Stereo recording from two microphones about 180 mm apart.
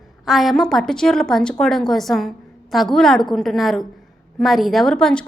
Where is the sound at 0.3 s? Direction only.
Centre (ahead or behind).